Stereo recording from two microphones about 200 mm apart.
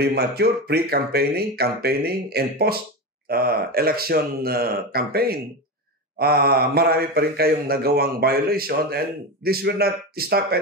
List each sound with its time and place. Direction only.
0.0 s a man's voice: 50° right (ahead or behind)